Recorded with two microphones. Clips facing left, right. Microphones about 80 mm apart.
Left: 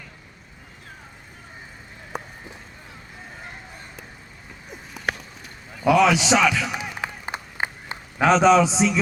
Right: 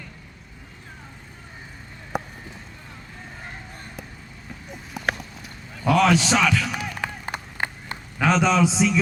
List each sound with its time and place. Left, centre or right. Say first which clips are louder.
2.1 s run: right 4 dB; centre
4.7 s clip-clop: right 1 dB; centre
5.7 s a man's voice: left 1 dB; centre
7.3 s run: even; left
7.9 s a man's voice: left 4 dB; centre